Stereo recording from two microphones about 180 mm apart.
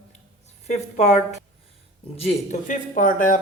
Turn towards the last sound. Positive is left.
turn(degrees=45)  # may be behind; listen again after turning